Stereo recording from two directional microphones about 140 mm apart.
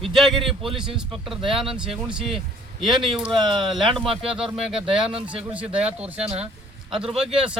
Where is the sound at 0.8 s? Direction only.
5° right (ahead or behind).